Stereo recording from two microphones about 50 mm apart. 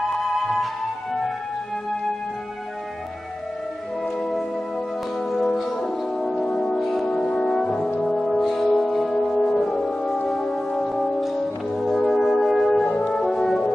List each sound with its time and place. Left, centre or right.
0.1 s music: centre
4.2 s music: centre
5.6 s brass instrument: centre
6.5 s music: centre
7.2 s brass instrument: centre
8.7 s french horn: centre
10.9 s brass instrument: centre
12.8 s french horn: left
13.2 s french horn: centre